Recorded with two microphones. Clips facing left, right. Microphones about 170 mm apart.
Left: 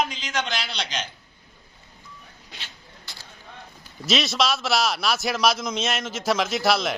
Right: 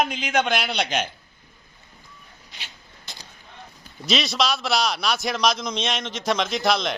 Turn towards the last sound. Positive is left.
turn(degrees=5)  # may be behind; listen again after turning